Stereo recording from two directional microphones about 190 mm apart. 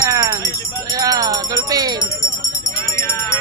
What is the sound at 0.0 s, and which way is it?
Music, 15° right (ahead or behind).